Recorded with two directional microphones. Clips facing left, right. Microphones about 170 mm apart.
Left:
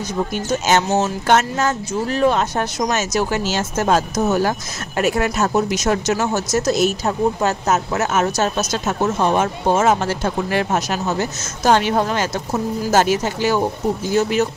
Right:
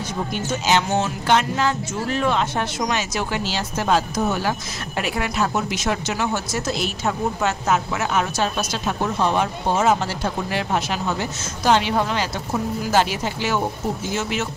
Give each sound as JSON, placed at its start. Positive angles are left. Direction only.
{"t": 0.7, "sound": "speech", "side_deg": 40}